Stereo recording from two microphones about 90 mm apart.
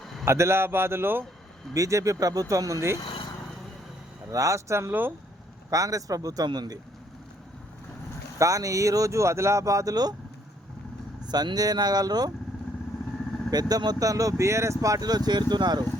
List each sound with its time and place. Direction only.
0.3 s speech: 30° right (ahead or behind)
1.7 s speech: 35° right (ahead or behind)
4.3 s speech: 35° right (ahead or behind)
5.7 s speech: 40° right (ahead or behind)
8.4 s speech: 40° right (ahead or behind)
11.3 s speech: 50° right (ahead or behind)
13.5 s speech: 45° right (ahead or behind)